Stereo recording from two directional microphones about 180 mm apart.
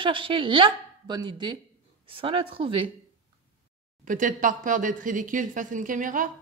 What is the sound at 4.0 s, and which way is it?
Speech, 45° right (ahead or behind).